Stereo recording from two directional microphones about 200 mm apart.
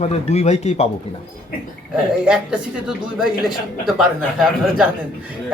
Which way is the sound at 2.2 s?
5° right (ahead or behind).